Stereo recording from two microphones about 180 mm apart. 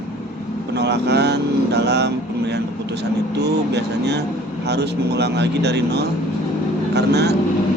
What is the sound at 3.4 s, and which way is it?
Speech, 70° right (ahead or behind).